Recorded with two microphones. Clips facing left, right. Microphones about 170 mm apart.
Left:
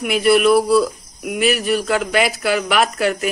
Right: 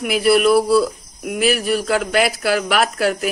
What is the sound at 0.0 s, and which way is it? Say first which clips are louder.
Speech: even; centre (ahead or behind).